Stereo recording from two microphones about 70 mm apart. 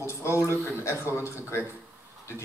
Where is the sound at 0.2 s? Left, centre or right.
Left.